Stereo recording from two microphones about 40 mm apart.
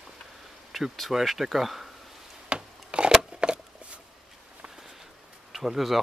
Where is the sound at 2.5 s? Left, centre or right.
Right.